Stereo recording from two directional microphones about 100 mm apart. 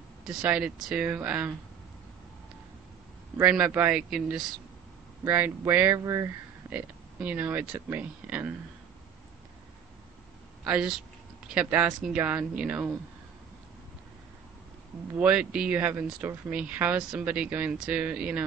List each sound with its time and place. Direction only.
0.3 s speech: 10° right (ahead or behind)
3.3 s speech: 10° right (ahead or behind)
5.2 s speech: 20° right (ahead or behind)
6.7 s speech: 15° right (ahead or behind)
10.6 s speech: 10° right (ahead or behind)
15.1 s speech: 10° right (ahead or behind)